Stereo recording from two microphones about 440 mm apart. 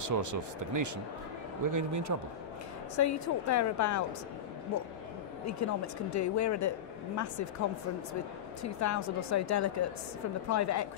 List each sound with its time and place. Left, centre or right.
0.0 s speech: right
3.0 s speech: left
5.5 s speech: left
8.6 s speech: left